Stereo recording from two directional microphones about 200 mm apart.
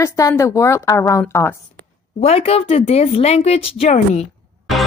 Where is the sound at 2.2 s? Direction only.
30° left (ahead or behind).